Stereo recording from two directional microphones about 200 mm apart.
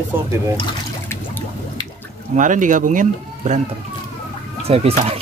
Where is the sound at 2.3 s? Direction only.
40° right (ahead or behind).